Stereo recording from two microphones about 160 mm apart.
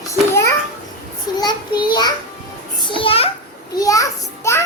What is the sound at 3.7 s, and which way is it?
Speech, 20° left (ahead or behind).